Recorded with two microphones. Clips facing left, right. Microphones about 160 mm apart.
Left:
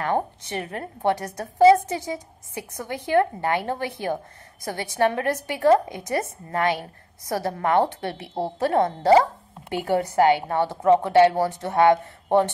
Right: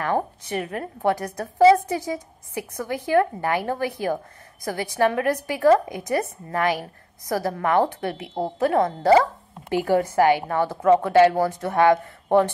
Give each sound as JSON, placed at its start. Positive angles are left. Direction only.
{"t": 0.0, "sound": "a woman's voice", "side_deg": 25}